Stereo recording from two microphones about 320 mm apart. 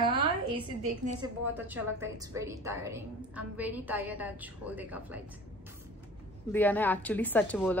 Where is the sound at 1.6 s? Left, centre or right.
Centre.